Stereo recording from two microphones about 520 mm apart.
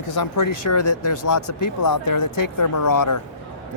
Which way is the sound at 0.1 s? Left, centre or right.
Left.